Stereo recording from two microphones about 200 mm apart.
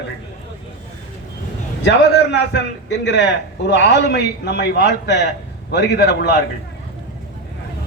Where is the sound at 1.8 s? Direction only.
60° left (ahead or behind).